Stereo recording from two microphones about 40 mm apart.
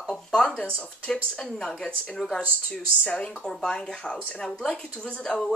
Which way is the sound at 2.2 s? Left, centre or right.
Centre.